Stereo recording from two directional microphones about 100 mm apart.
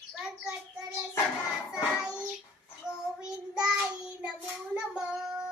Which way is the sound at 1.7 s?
10° right (ahead or behind).